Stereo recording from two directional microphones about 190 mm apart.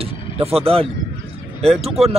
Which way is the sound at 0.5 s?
30° right (ahead or behind).